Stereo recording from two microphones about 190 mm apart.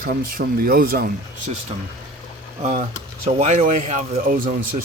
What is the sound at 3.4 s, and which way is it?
Speech, 40° right (ahead or behind).